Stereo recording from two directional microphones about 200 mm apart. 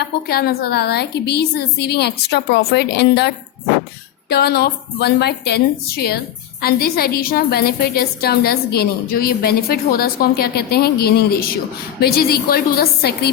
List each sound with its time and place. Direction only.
0.3 s a woman's voice: 50° left (ahead or behind)